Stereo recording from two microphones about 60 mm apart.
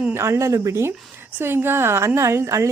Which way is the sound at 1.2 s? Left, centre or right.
Right.